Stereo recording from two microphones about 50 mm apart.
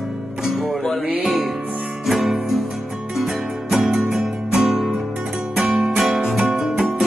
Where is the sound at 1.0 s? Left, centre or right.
Right.